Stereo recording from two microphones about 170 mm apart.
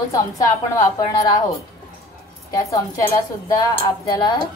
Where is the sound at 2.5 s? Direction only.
20° left (ahead or behind).